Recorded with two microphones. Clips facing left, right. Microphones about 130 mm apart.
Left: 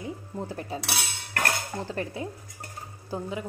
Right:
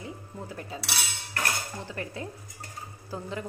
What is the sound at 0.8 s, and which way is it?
Cutlery, 60° left (ahead or behind).